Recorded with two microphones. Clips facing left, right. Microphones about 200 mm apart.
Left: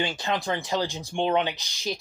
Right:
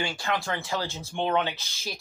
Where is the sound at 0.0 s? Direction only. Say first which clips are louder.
Left 2 dB; 20° left (ahead or behind).